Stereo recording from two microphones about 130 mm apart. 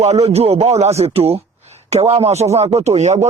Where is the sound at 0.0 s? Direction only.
55° right (ahead or behind).